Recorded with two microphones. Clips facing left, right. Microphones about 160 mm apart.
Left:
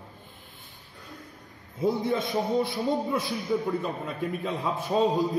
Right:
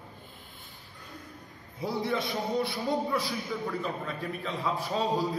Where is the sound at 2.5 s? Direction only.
20° left (ahead or behind).